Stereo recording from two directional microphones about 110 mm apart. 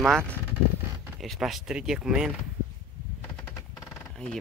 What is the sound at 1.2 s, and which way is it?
Speech, centre (ahead or behind).